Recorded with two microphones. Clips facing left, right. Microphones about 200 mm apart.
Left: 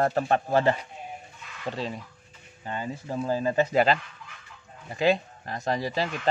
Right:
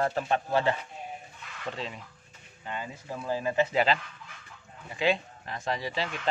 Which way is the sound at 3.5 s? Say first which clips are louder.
Left 3 dB; 45° left (ahead or behind).